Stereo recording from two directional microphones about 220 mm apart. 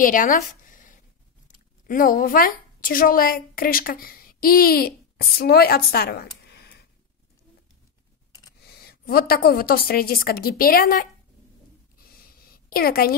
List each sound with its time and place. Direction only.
0.0 s a sound: 40° left (ahead or behind)
1.9 s a woman's voice: 40° left (ahead or behind)
8.5 s a woman's voice: 45° left (ahead or behind)
12.6 s a woman's voice: 40° left (ahead or behind)